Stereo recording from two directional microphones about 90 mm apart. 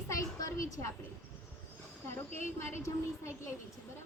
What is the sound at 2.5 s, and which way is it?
Speech, 30° left (ahead or behind).